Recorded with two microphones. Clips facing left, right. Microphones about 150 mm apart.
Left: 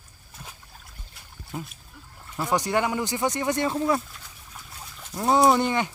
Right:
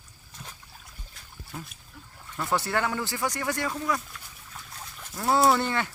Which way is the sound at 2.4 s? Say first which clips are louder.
Left 3 dB; 15° left (ahead or behind).